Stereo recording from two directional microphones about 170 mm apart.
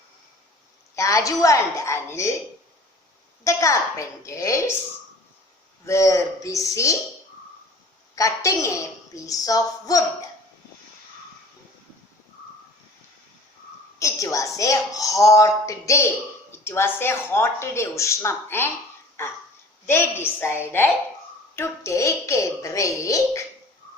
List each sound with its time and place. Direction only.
0.9 s speech: 20° left (ahead or behind)
3.4 s a woman's voice: 20° left (ahead or behind)
5.8 s a woman's voice: 15° left (ahead or behind)
8.1 s a woman's voice: 20° left (ahead or behind)
14.0 s a woman's voice: 20° left (ahead or behind)